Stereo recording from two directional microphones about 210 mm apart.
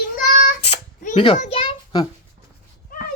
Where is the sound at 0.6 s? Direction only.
35° left (ahead or behind).